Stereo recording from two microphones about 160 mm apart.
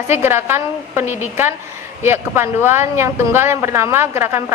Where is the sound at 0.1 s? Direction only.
15° right (ahead or behind).